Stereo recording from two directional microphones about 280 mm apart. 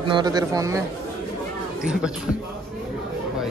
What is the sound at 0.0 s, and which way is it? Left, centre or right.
Speech, centre.